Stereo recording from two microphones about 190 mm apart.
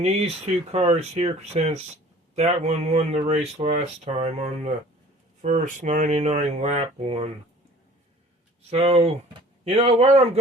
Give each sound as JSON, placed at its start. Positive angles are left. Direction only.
{"t": 0.0, "sound": "speech", "side_deg": -35}
{"t": 8.7, "sound": "speech", "side_deg": -35}